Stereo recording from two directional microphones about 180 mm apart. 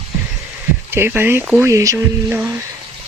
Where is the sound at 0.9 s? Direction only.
15° right (ahead or behind).